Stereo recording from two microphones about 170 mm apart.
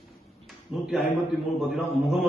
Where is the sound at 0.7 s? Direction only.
Centre (ahead or behind).